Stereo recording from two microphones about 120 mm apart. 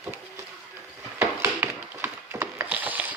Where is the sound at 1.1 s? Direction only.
20° right (ahead or behind).